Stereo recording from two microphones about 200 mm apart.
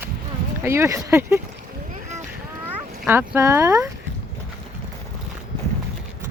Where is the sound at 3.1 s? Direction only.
10° right (ahead or behind).